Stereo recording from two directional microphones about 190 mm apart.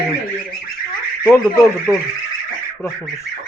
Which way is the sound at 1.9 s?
10° right (ahead or behind).